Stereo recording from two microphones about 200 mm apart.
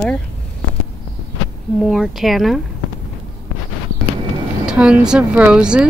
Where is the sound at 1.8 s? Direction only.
Centre (ahead or behind).